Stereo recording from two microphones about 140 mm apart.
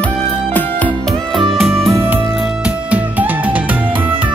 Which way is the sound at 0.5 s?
10° left (ahead or behind).